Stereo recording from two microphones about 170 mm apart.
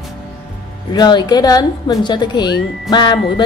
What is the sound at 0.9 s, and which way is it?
A woman's voice, 25° left (ahead or behind).